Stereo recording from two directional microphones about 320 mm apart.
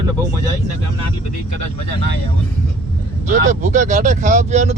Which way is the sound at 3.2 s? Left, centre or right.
Right.